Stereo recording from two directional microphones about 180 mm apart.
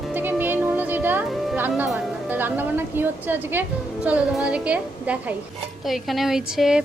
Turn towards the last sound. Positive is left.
turn(degrees=0)  # may be behind; listen again after turning